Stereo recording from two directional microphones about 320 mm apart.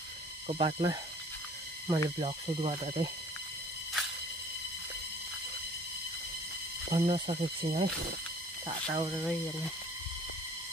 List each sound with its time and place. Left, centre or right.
0.5 s speech: centre
6.9 s speech: centre